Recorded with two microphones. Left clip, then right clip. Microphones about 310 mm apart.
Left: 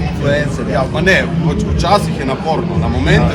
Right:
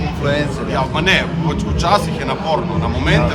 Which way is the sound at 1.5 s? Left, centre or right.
Centre.